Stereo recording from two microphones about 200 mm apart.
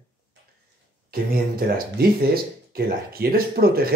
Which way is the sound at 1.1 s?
50° right (ahead or behind).